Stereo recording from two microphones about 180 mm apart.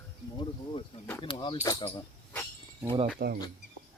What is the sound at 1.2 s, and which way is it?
Speech, 25° left (ahead or behind).